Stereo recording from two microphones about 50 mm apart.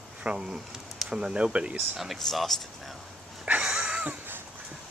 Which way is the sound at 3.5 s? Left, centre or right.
Centre.